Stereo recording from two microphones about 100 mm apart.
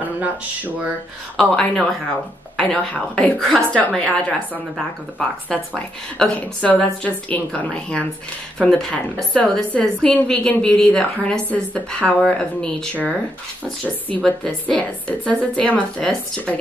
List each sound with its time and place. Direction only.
1.3 s a woman's voice: 5° left (ahead or behind)
5.5 s a woman's voice: 10° left (ahead or behind)